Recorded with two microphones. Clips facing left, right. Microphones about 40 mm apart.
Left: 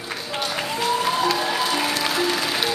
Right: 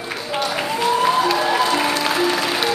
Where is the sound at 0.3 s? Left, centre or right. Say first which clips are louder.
Right 4 dB; centre.